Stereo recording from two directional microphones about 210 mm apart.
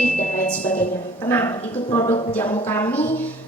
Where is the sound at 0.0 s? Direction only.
5° left (ahead or behind).